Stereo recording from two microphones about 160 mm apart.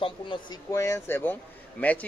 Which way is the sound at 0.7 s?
20° left (ahead or behind).